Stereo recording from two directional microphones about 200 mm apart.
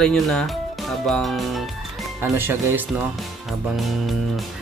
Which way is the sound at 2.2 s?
10° right (ahead or behind).